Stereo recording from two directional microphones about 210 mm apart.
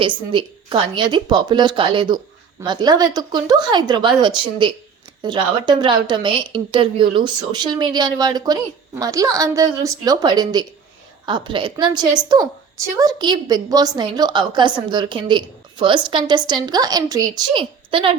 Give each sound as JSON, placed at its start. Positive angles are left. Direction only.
{"t": 0.3, "sound": "a woman's voice", "side_deg": -25}